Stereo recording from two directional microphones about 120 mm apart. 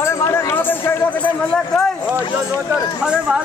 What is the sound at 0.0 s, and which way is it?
Run, 25° left (ahead or behind).